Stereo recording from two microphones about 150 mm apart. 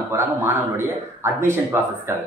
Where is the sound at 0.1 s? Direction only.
15° right (ahead or behind).